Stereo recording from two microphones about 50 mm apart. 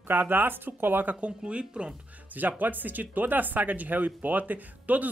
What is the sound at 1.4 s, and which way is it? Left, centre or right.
Speech, right.